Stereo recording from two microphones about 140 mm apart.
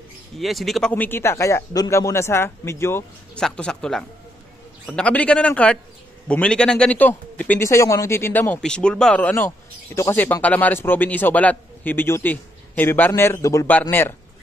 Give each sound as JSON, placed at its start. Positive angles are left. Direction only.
{"t": 0.4, "sound": "speech", "side_deg": 0}
{"t": 3.3, "sound": "a man's voice", "side_deg": 5}